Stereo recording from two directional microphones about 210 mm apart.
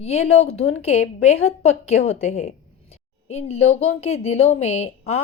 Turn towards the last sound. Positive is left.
turn(degrees=30)  # may be behind; listen again after turning